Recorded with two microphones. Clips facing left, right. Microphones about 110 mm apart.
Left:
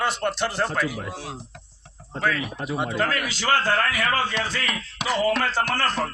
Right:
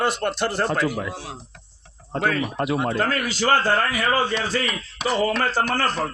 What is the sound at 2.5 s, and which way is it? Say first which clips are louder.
Speech: right 5 dB; 65° right (ahead or behind).